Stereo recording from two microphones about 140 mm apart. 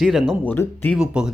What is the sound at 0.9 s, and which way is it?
Speech, 5° right (ahead or behind).